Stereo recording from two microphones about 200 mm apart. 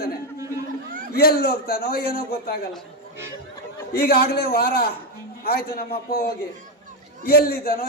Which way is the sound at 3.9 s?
50° left (ahead or behind).